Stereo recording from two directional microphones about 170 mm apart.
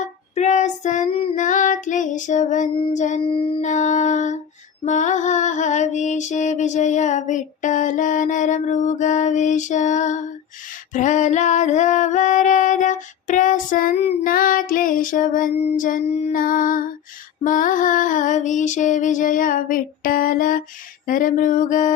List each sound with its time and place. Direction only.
0.0 s child singing: 45° left (ahead or behind)
1.4 s child singing: 50° left (ahead or behind)
2.9 s mantra: 45° left (ahead or behind)
3.2 s music: 30° left (ahead or behind)
3.7 s a sound: 45° left (ahead or behind)
4.9 s mantra: 45° left (ahead or behind)
10.9 s female singing: 45° left (ahead or behind)
14.3 s child singing: 55° left (ahead or behind)
15.7 s mantra: 50° left (ahead or behind)